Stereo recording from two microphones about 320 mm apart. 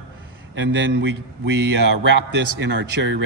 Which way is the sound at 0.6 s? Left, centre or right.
Right.